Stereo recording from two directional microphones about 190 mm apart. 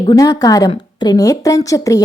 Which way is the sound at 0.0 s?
20° left (ahead or behind).